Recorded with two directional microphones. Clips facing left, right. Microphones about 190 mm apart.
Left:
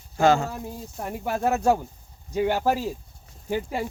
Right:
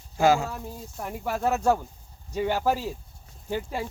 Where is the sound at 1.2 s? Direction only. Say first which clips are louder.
Left 2 dB; 15° left (ahead or behind).